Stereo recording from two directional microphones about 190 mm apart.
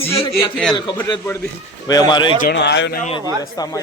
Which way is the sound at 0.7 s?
20° left (ahead or behind).